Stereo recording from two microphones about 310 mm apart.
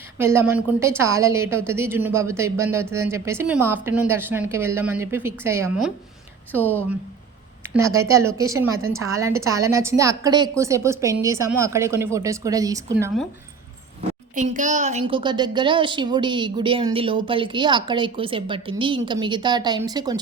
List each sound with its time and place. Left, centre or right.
0.2 s a woman's voice: centre
7.6 s a woman's voice: centre
14.3 s a woman's voice: right